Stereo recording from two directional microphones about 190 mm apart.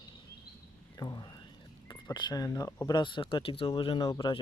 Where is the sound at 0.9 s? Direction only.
20° left (ahead or behind).